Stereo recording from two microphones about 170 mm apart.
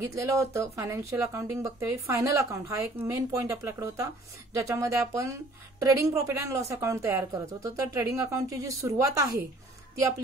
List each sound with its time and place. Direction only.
0.0 s speech: 15° right (ahead or behind)